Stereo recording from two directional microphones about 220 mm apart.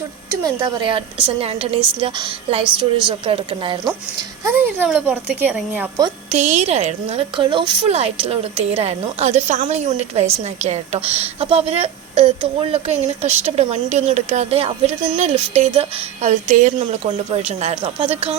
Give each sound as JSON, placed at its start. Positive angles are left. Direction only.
{"t": 0.4, "sound": "a woman's voice", "side_deg": -20}
{"t": 4.4, "sound": "speech", "side_deg": -10}
{"t": 6.3, "sound": "a woman's voice", "side_deg": -30}